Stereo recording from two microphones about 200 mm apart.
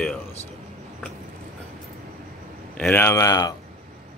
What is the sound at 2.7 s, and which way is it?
Speech, 10° left (ahead or behind).